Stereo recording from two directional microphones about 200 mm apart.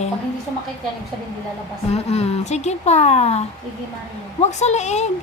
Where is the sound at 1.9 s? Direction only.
30° left (ahead or behind).